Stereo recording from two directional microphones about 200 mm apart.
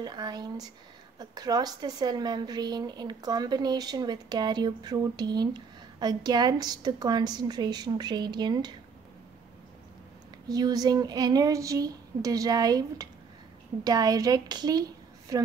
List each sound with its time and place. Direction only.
0.0 s a woman's voice: 20° right (ahead or behind)
10.5 s a woman's voice: 20° right (ahead or behind)